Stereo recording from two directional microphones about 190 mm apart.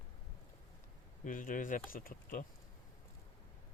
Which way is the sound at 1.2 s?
45° left (ahead or behind).